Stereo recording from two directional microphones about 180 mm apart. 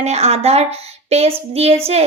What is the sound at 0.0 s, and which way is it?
A woman's voice, 35° right (ahead or behind).